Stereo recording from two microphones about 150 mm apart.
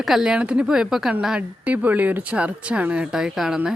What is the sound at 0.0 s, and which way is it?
A woman's voice, 5° right (ahead or behind).